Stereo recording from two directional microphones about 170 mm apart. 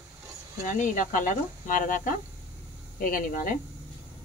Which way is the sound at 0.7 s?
50° left (ahead or behind).